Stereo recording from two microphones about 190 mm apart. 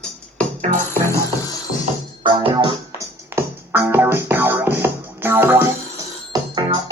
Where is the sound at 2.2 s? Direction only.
25° right (ahead or behind).